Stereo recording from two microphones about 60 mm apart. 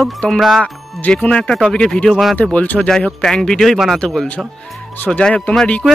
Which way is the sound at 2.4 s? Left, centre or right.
Left.